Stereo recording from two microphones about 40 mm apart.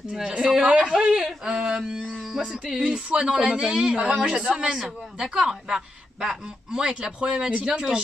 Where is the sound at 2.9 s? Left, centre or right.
Right.